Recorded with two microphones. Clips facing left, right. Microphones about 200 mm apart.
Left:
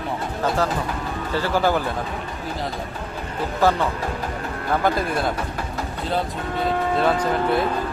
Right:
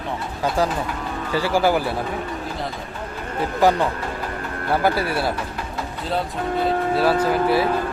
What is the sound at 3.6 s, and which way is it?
Speech, 15° right (ahead or behind).